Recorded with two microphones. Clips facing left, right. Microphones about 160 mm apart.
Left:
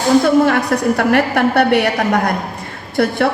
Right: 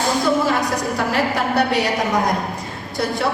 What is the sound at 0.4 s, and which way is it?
A woman's voice, 60° left (ahead or behind).